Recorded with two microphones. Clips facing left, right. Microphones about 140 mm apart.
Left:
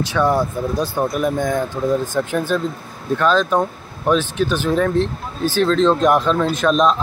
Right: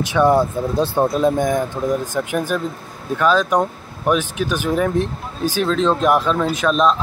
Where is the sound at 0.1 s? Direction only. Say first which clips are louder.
Right 4 dB; 20° right (ahead or behind).